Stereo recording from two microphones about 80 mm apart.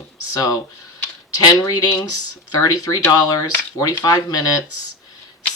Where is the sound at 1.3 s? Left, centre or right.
Left.